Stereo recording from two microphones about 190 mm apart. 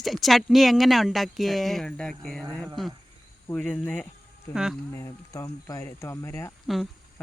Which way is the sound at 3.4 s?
5° left (ahead or behind).